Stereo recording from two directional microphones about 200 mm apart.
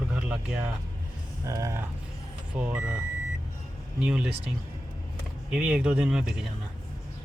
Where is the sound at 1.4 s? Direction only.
15° right (ahead or behind).